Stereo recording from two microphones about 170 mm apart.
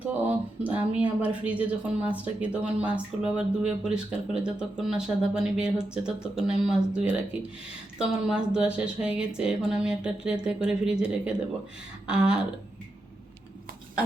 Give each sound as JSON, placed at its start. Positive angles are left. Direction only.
{"t": 0.0, "sound": "speech", "side_deg": -10}
{"t": 12.0, "sound": "speech", "side_deg": -5}